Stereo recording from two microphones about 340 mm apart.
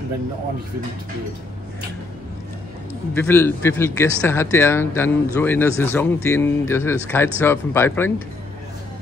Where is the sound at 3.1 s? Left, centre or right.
Centre.